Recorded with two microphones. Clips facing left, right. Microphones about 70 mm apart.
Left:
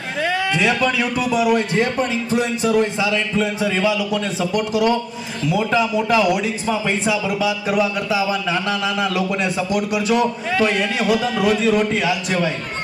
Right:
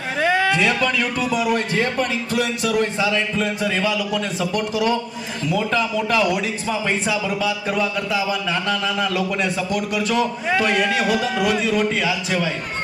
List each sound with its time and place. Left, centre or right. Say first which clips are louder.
0.2 s a sound: right 2 dB; right
0.5 s speech: left 1 dB; centre
1.5 s a man's voice: left 2 dB; left
3.3 s speech: left 2 dB; centre
4.5 s a man's voice: left 3 dB; left
5.5 s speech: left 3 dB; centre
7.3 s speech: left 2 dB; centre